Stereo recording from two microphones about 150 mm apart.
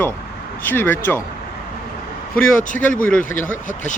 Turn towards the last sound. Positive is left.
turn(degrees=60)  # may be behind; listen again after turning